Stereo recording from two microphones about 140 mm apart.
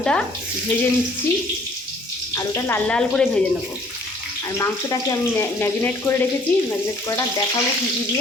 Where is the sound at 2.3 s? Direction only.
20° left (ahead or behind).